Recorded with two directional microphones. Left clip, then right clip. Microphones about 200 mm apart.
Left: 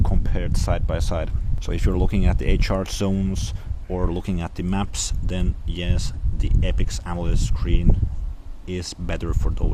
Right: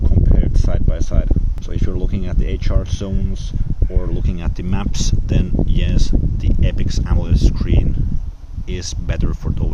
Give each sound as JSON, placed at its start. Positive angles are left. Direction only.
{"t": 0.0, "sound": "a sound", "side_deg": 30}
{"t": 1.7, "sound": "speech", "side_deg": 30}
{"t": 4.3, "sound": "speech", "side_deg": 15}